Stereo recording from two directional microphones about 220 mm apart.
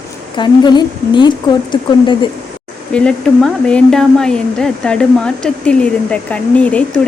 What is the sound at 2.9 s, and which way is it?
A woman's voice, 5° left (ahead or behind).